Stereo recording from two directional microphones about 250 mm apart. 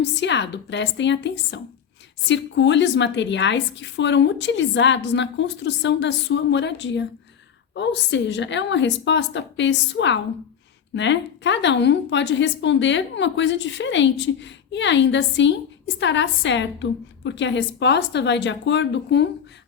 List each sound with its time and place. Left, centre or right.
0.0 s a woman's voice: left